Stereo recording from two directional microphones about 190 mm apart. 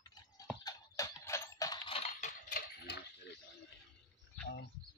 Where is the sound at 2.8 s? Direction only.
60° left (ahead or behind).